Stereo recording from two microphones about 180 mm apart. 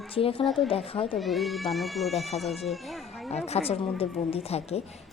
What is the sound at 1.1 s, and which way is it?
Speech, centre (ahead or behind).